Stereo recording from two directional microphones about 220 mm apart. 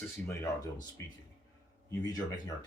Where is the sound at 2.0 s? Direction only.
15° left (ahead or behind).